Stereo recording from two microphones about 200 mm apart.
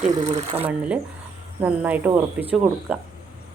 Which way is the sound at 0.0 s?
35° right (ahead or behind).